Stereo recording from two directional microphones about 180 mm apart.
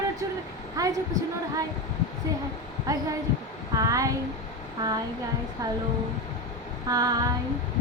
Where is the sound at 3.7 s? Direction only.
20° right (ahead or behind).